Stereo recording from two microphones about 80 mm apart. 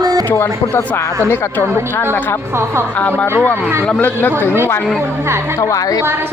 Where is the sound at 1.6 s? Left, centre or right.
Right.